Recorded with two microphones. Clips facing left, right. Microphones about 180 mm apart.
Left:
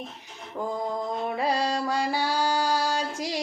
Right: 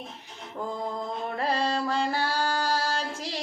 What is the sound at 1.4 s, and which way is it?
Mantra, 15° left (ahead or behind).